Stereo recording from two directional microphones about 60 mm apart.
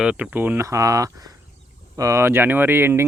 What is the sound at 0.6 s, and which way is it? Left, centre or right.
Speech, right.